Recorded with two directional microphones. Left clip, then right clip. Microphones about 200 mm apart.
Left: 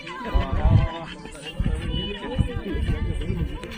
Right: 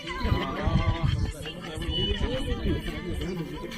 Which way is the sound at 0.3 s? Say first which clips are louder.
Left 2 dB; 30° right (ahead or behind).